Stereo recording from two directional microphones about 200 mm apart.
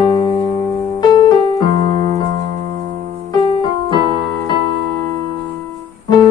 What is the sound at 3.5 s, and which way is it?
Keyboard, 25° left (ahead or behind).